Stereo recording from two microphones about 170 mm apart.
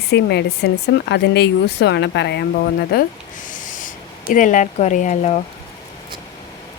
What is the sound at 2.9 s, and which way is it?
Speech, 65° left (ahead or behind).